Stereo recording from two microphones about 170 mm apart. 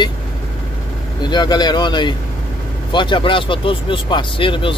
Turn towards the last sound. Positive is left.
turn(degrees=30)  # may be behind; listen again after turning